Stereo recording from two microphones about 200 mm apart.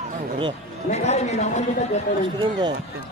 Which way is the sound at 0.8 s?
35° left (ahead or behind).